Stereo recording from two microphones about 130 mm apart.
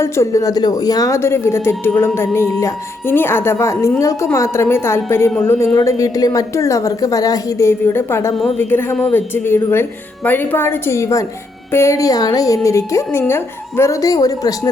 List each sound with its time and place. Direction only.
0.0 s speech: 25° left (ahead or behind)